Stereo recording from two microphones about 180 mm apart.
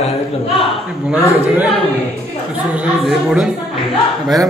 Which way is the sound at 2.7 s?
5° right (ahead or behind).